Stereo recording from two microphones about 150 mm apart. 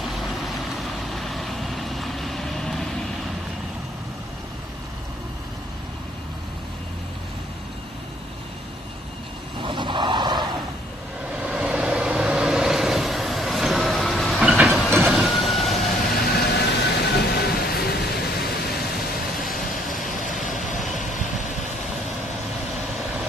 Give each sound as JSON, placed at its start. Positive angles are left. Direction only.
{"t": 1.1, "sound": "vehicle", "side_deg": 0}
{"t": 9.6, "sound": "a sound", "side_deg": -35}
{"t": 11.4, "sound": "vehicle", "side_deg": -5}
{"t": 14.9, "sound": "train", "side_deg": -15}
{"t": 15.1, "sound": "vehicle", "side_deg": 0}
{"t": 16.2, "sound": "vehicle", "side_deg": 90}
{"t": 20.4, "sound": "vehicle", "side_deg": 55}